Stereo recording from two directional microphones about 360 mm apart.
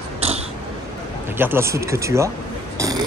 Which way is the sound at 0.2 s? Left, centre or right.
Centre.